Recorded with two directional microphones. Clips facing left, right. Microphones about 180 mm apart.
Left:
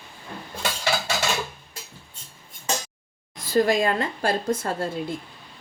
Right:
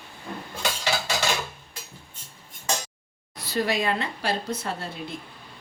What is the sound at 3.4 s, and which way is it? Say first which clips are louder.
Speech: left 6 dB; 45° left (ahead or behind).